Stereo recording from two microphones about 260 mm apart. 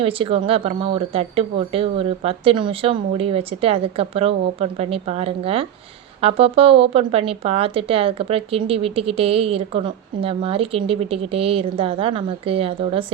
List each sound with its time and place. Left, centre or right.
0.0 s speech: right